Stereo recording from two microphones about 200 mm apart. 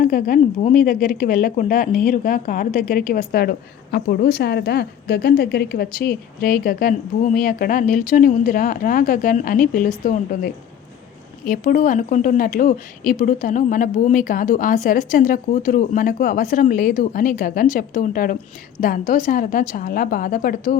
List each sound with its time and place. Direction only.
0.0 s speech: 45° left (ahead or behind)